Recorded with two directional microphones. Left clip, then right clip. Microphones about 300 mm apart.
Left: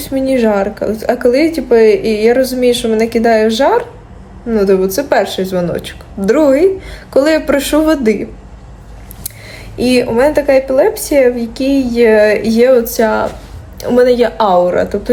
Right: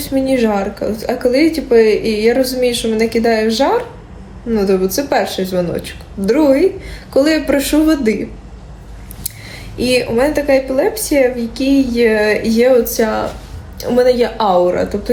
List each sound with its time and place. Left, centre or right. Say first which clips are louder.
0.0 s speech: left 2 dB; centre
9.7 s speech: left 2 dB; centre